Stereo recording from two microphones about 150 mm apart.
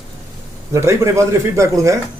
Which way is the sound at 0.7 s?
20° right (ahead or behind).